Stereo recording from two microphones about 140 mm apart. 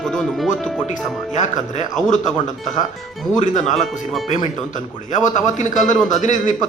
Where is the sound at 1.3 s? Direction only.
60° left (ahead or behind).